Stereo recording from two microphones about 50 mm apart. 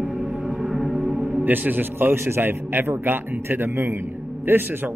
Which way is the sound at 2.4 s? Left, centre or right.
Right.